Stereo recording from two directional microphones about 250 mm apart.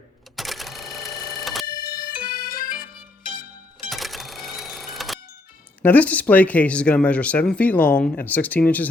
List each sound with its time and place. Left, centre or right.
0.3 s cash register: centre
1.6 s music: centre
2.3 s bagpipes: left
3.8 s sewing machine: centre
5.8 s speech: centre